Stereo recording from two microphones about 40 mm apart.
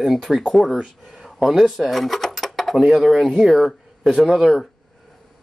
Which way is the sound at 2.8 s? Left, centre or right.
Centre.